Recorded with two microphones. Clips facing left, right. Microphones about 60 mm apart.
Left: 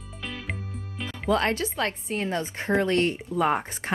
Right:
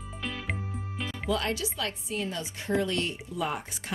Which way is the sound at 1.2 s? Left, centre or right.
Left.